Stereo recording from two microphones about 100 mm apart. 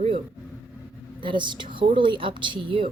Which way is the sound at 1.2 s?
55° right (ahead or behind).